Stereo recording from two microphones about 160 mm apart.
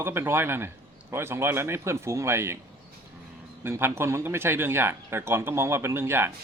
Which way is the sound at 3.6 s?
15° right (ahead or behind).